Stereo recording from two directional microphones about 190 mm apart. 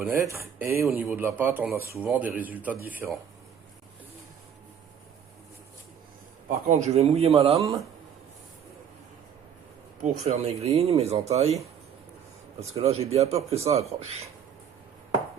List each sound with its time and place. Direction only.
0.0 s a man's voice: 15° right (ahead or behind)
6.7 s speech: 40° right (ahead or behind)
10.0 s speech: 35° right (ahead or behind)
12.7 s speech: 30° right (ahead or behind)